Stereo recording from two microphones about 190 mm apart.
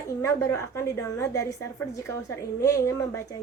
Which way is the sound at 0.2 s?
15° left (ahead or behind).